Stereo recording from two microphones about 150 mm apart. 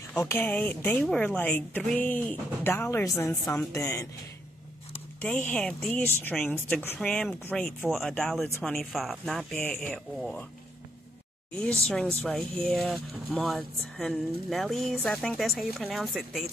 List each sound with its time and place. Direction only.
0.1 s speech: 15° left (ahead or behind)
5.2 s speech: 10° left (ahead or behind)
7.0 s speech: 5° left (ahead or behind)
11.5 s speech: 5° left (ahead or behind)